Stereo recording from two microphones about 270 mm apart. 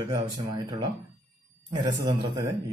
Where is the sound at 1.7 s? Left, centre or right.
Centre.